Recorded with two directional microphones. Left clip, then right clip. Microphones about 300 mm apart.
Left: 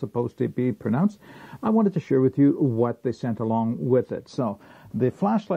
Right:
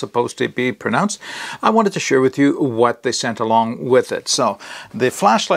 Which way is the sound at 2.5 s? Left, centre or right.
Right.